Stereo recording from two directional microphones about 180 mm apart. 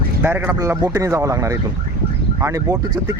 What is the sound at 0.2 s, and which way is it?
Speech, 10° right (ahead or behind).